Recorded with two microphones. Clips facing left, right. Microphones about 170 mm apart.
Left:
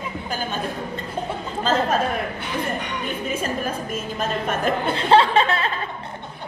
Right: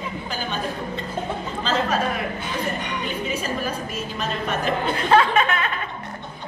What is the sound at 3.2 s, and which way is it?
A woman's voice, 50° left (ahead or behind).